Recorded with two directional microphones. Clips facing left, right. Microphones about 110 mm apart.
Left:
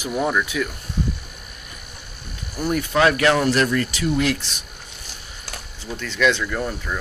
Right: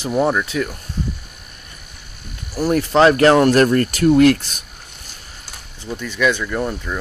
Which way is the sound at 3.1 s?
45° right (ahead or behind).